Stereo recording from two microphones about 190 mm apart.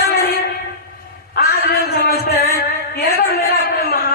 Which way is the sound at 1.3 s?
55° left (ahead or behind).